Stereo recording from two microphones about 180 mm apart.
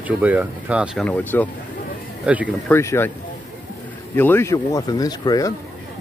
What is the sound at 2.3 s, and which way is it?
Speech, 5° right (ahead or behind).